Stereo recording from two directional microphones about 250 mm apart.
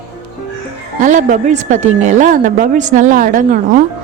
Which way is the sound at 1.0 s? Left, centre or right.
Right.